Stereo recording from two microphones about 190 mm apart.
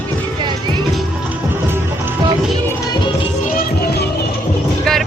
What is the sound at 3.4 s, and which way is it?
Music, 50° left (ahead or behind).